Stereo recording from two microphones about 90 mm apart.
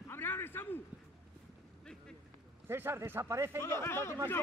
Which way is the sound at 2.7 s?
25° right (ahead or behind).